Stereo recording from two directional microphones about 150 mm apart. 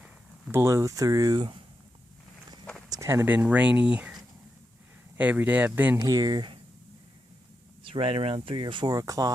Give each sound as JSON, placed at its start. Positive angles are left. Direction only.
{"t": 0.5, "sound": "speech", "side_deg": -20}
{"t": 2.9, "sound": "speech", "side_deg": -20}
{"t": 6.0, "sound": "speech", "side_deg": -25}
{"t": 7.9, "sound": "speech", "side_deg": -40}